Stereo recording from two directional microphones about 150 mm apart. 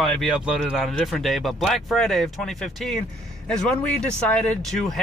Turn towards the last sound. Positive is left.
turn(degrees=5)  # may be behind; listen again after turning